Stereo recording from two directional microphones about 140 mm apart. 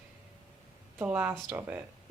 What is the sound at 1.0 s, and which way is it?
Speech, 10° right (ahead or behind).